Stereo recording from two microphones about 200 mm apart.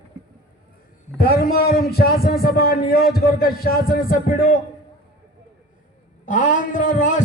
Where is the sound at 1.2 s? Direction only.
50° left (ahead or behind).